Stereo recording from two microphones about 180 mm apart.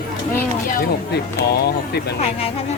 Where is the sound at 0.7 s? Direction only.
55° left (ahead or behind).